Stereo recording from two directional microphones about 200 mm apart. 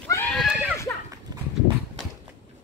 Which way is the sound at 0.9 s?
10° left (ahead or behind).